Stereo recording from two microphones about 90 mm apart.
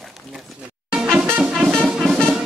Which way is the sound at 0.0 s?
Centre (ahead or behind).